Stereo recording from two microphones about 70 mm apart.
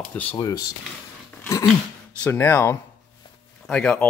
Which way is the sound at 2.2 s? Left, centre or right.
Left.